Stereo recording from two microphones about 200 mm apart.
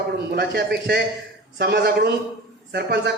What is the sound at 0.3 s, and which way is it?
A man's voice, 55° right (ahead or behind).